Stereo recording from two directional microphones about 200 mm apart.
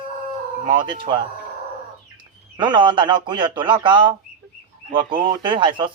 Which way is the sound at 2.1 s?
25° right (ahead or behind).